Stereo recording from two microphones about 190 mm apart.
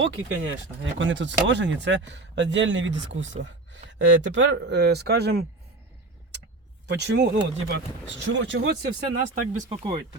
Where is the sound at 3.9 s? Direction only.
70° right (ahead or behind).